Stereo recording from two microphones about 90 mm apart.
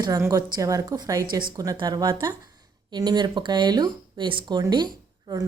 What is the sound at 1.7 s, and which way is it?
A woman's voice, 55° right (ahead or behind).